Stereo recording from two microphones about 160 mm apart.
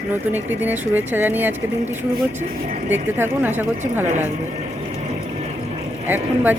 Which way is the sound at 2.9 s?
15° right (ahead or behind).